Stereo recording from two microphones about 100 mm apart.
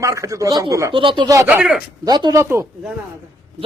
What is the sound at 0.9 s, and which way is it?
Speech, 55° right (ahead or behind).